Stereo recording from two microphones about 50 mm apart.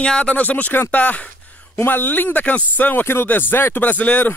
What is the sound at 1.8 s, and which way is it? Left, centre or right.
Speech, left.